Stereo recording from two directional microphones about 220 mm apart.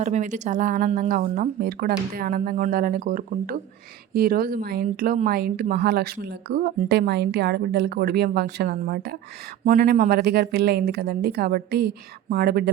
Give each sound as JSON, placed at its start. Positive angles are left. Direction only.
{"t": 0.0, "sound": "speech", "side_deg": -35}